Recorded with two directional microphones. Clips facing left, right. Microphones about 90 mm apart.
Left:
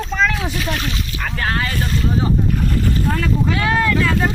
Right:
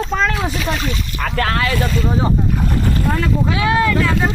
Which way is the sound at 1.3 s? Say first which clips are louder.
Right 3 dB; 85° right.